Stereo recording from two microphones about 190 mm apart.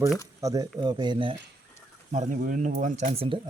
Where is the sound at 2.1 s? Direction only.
40° right (ahead or behind).